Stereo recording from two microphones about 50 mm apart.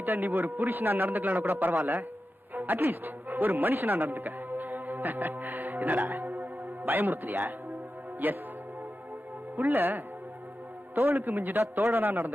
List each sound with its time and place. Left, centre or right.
0.0 s a man's voice: right
3.5 s music: right
8.2 s a man's voice: right
9.6 s a man's voice: right